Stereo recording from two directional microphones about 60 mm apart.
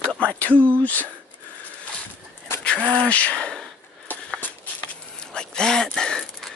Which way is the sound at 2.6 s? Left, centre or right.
Centre.